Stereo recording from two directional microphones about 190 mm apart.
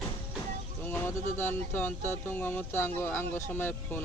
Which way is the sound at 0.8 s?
10° left (ahead or behind).